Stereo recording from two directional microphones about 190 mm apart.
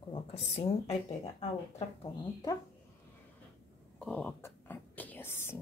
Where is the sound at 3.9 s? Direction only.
5° left (ahead or behind).